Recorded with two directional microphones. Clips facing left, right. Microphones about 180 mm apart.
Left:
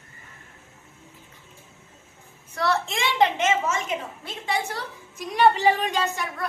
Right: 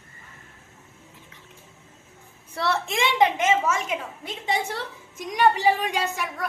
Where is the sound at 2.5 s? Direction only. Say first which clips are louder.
Even; 25° right (ahead or behind).